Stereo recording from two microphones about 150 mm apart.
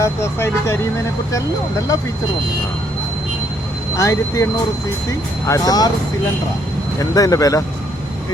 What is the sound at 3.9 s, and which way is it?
Speech, 20° left (ahead or behind).